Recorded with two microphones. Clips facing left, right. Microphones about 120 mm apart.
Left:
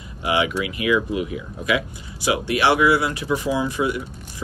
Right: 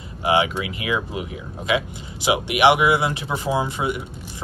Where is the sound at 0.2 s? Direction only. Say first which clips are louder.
Right 2 dB; 25° right (ahead or behind).